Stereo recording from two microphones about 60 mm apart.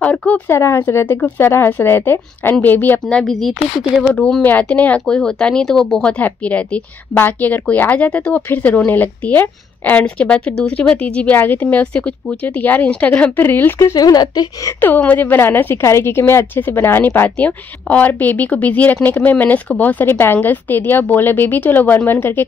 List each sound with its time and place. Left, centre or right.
0.5 s speech: left
0.7 s a woman's voice: left
3.1 s speech: centre
4.4 s a woman's voice: left
5.0 s speech: centre
6.1 s a woman's voice: left
11.3 s a woman's voice: left
13.4 s a woman's voice: left
13.9 s speech: left
14.8 s a woman's voice: left
15.8 s a woman's voice: left
17.4 s a woman's voice: left